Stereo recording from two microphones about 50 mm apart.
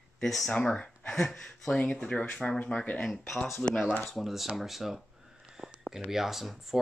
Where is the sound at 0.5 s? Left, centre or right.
Left.